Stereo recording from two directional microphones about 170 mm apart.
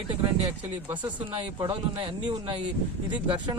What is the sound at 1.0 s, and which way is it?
Speech, 30° right (ahead or behind).